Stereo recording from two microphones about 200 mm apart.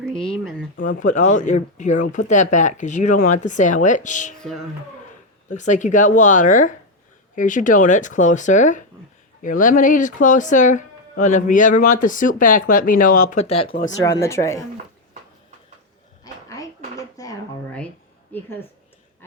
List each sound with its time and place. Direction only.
0.2 s speech: centre (ahead or behind)
0.8 s speech: 40° left (ahead or behind)
5.5 s speech: 40° left (ahead or behind)
14.0 s speech: 15° left (ahead or behind)
16.2 s a sound: 20° left (ahead or behind)